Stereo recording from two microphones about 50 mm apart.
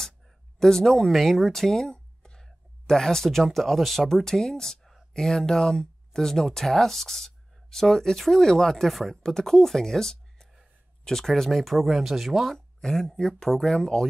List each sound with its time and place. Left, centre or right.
0.6 s speech: centre
12.5 s speech: centre